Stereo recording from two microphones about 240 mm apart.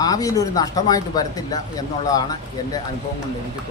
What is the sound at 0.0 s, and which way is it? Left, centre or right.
Speech, centre.